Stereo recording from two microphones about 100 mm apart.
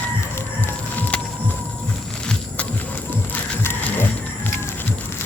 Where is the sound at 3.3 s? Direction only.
20° left (ahead or behind).